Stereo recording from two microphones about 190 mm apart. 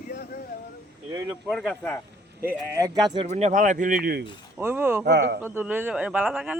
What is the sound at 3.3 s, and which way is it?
Speech, 40° right (ahead or behind).